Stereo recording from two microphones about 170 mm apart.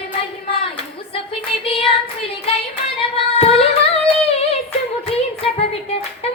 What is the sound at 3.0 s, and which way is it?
Singing, 35° left (ahead or behind).